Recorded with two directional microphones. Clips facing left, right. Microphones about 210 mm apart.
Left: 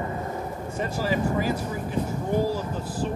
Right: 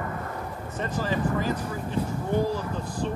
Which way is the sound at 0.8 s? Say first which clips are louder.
Left 2 dB; 10° left (ahead or behind).